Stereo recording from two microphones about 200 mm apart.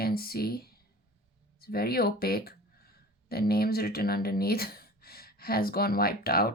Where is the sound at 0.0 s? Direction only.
50° left (ahead or behind).